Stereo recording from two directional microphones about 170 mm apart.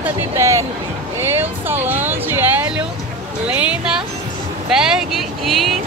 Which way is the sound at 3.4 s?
5° right (ahead or behind).